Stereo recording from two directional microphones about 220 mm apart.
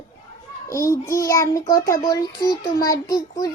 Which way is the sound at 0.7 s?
15° left (ahead or behind).